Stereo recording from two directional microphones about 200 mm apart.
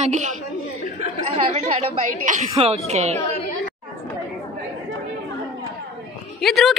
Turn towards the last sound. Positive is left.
turn(degrees=0)  # may be behind; listen again after turning